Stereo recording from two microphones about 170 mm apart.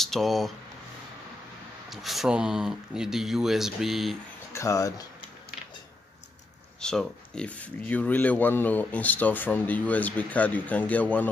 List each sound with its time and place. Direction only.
0.0 s speech: centre (ahead or behind)
1.9 s speech: centre (ahead or behind)
4.6 s speech: 20° left (ahead or behind)
6.8 s speech: 5° left (ahead or behind)